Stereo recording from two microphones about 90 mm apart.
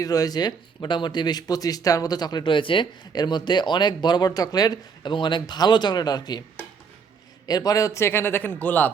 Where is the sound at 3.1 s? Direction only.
55° left (ahead or behind).